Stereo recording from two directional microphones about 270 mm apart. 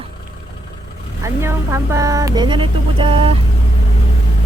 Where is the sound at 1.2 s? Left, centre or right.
Centre.